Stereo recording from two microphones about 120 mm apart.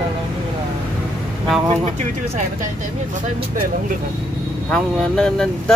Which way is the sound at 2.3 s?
90° right.